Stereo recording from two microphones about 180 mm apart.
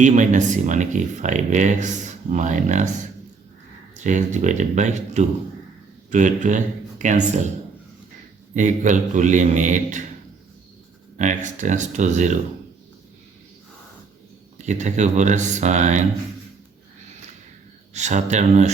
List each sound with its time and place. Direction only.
0.0 s speech: 40° right (ahead or behind)
3.9 s speech: 40° right (ahead or behind)
8.5 s speech: 45° right (ahead or behind)
11.2 s speech: 45° right (ahead or behind)
14.6 s speech: 40° right (ahead or behind)
17.9 s speech: 40° right (ahead or behind)